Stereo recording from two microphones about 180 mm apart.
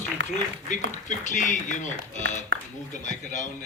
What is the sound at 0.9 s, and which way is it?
Speech, 45° left (ahead or behind).